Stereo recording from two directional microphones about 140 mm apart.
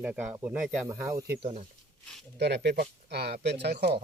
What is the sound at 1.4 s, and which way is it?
Speech, 50° right (ahead or behind).